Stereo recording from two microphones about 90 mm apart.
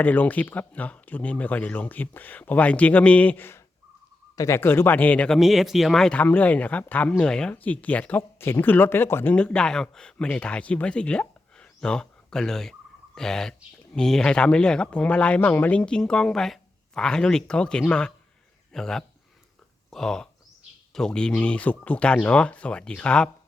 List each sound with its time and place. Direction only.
0.0 s speech: 20° left (ahead or behind)
5.4 s speech: centre (ahead or behind); by 9.3 s 25° left (ahead or behind)
9.3 s speech: 10° left (ahead or behind)